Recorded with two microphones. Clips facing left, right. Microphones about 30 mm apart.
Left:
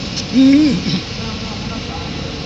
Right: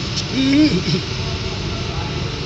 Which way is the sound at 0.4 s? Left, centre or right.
Right.